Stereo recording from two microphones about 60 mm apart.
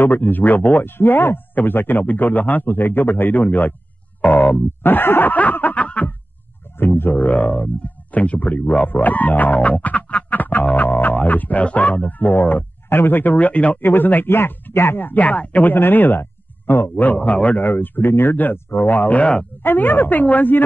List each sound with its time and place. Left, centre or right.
0.0 s speech: left
6.8 s speech: left
15.0 s speech: left
19.6 s speech: left